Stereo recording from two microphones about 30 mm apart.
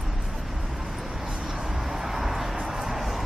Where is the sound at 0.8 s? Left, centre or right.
Centre.